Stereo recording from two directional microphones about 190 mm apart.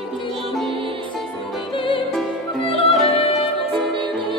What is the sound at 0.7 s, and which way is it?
Music, 30° right (ahead or behind).